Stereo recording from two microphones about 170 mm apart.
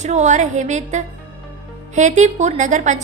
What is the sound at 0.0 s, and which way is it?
A woman's voice, 45° right (ahead or behind).